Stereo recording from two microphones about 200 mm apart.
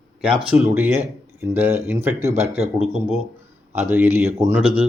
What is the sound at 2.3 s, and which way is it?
Speech, 30° right (ahead or behind).